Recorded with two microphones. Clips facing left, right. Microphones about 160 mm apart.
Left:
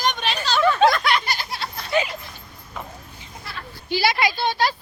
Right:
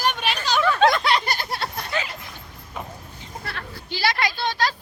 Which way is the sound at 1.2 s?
55° right (ahead or behind).